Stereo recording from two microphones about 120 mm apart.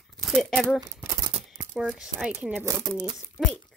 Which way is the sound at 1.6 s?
20° right (ahead or behind).